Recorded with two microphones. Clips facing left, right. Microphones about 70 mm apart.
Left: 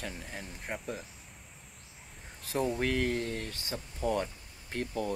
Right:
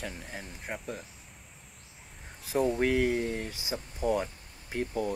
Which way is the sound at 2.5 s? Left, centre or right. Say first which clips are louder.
Right 4 dB; centre.